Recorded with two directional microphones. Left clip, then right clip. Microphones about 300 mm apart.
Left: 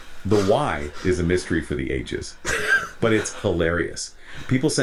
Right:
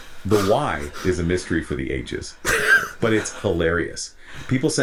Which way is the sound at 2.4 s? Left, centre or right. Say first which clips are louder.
Right 4 dB; right.